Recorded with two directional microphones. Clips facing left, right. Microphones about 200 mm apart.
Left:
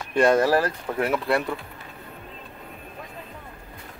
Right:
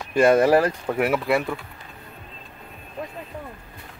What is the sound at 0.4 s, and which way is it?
Speech, 15° right (ahead or behind).